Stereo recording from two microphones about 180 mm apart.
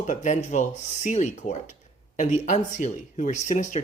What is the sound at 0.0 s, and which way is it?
Speech, 40° left (ahead or behind).